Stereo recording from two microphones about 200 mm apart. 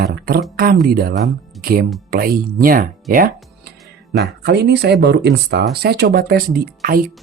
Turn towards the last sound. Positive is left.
turn(degrees=-45)  # may be behind; listen again after turning